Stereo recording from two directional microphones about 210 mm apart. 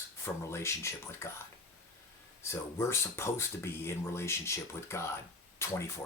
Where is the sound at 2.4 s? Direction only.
15° left (ahead or behind).